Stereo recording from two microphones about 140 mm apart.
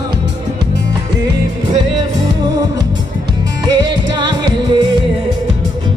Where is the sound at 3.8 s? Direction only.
30° right (ahead or behind).